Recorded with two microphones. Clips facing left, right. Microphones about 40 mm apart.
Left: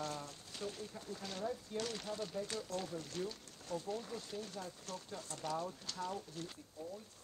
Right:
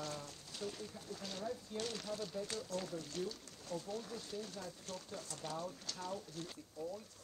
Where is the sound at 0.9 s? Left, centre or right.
Left.